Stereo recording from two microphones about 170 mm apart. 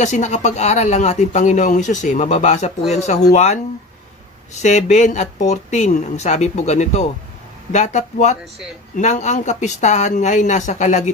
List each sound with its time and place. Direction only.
0.0 s speech: 45° left (ahead or behind)
4.6 s speech: 45° left (ahead or behind)